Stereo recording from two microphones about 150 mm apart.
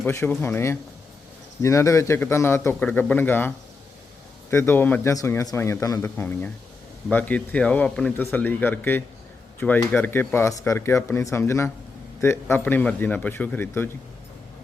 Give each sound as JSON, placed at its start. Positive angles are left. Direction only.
{"t": 0.1, "sound": "speech", "side_deg": 15}
{"t": 4.5, "sound": "speech", "side_deg": 15}